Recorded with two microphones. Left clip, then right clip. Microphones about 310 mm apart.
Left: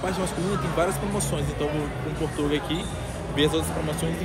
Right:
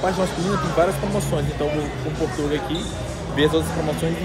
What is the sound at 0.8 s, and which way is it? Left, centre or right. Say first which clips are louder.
Speech: right 6 dB; centre.